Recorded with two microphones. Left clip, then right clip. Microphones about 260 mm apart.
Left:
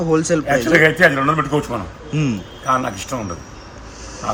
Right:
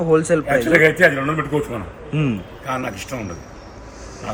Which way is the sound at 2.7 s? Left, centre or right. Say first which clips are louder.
Left 6 dB; left.